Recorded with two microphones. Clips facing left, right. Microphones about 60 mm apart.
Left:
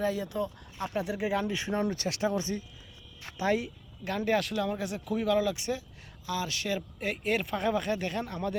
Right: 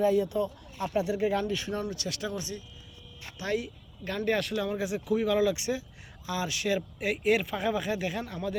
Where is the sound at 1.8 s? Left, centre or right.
Left.